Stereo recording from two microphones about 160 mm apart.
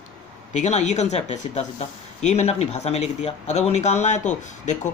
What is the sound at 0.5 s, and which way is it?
Speech, 45° left (ahead or behind).